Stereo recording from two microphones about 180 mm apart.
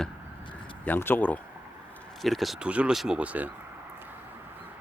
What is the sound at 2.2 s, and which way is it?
Speech, centre (ahead or behind).